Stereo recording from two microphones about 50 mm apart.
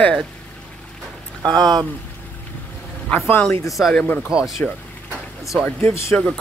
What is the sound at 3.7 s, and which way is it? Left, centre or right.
Speech, centre.